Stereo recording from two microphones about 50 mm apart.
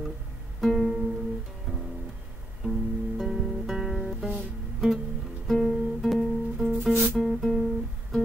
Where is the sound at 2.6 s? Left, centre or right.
Centre.